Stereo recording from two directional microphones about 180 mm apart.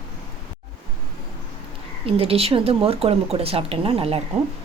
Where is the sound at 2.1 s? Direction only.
30° right (ahead or behind).